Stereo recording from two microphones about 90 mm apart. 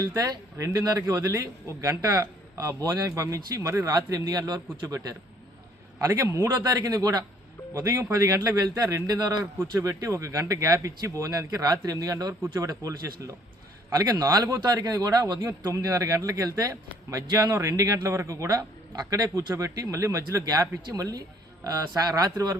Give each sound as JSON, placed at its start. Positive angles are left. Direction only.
{"t": 0.5, "sound": "speech", "side_deg": -35}
{"t": 6.1, "sound": "a man's voice", "side_deg": -30}
{"t": 6.7, "sound": "a man's voice", "side_deg": -40}
{"t": 15.4, "sound": "speech", "side_deg": -35}